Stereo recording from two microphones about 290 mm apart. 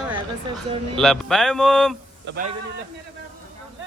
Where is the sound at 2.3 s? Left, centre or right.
Right.